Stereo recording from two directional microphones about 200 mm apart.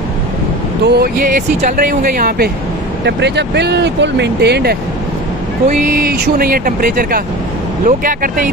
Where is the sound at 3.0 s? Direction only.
60° right (ahead or behind).